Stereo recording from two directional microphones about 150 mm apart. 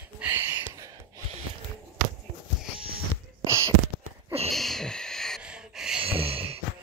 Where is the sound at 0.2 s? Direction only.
15° right (ahead or behind).